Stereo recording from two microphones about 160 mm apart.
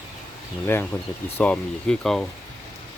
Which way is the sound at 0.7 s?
15° left (ahead or behind).